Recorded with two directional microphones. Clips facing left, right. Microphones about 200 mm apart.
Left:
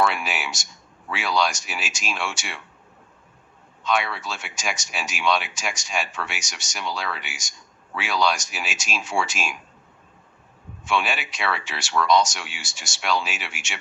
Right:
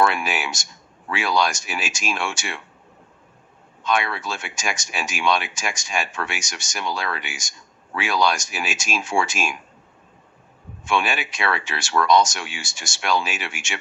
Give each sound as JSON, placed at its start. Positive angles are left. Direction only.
{"t": 0.0, "sound": "speech", "side_deg": -50}
{"t": 3.8, "sound": "speech", "side_deg": -50}
{"t": 10.8, "sound": "speech", "side_deg": -50}